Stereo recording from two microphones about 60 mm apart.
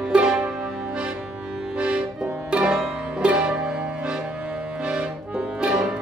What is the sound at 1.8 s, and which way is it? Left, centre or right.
Music, centre.